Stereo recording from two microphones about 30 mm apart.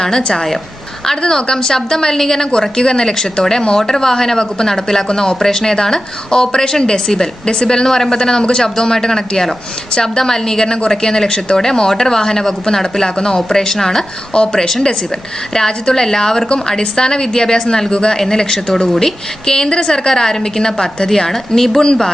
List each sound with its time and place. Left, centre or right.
0.2 s a woman's voice: left
1.0 s a woman's voice: centre
2.5 s a woman's voice: left
3.8 s a woman's voice: centre
5.0 s a woman's voice: left
7.4 s a woman's voice: left
7.9 s a woman's voice: centre
8.2 s a woman's voice: left
14.3 s a woman's voice: left
16.5 s a woman's voice: left; by 21.8 s centre